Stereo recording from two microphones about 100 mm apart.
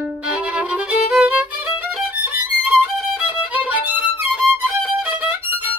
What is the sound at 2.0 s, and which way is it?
Violin, 15° right (ahead or behind).